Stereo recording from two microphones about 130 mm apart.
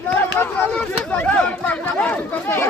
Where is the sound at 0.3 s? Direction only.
10° left (ahead or behind).